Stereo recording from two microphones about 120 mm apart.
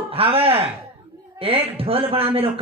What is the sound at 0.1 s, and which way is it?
Speech, 50° right (ahead or behind).